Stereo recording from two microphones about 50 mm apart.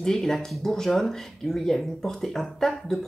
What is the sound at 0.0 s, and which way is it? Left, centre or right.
Speech, centre.